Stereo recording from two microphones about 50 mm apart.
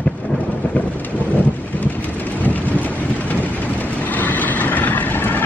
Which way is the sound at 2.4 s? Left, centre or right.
Left.